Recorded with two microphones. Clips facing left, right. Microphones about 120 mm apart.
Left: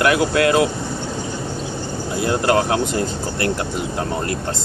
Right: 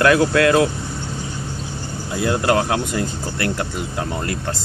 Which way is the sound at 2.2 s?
30° left (ahead or behind).